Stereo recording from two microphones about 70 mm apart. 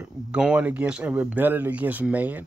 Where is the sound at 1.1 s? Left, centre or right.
Right.